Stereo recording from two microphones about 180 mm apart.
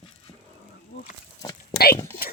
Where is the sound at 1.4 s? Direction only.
20° left (ahead or behind).